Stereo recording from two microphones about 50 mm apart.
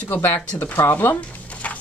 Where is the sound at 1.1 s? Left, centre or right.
Left.